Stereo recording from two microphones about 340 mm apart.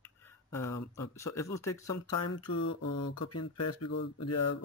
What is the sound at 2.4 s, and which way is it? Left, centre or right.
Speech, left.